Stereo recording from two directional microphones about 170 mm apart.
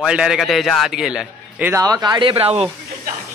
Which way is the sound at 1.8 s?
25° right (ahead or behind).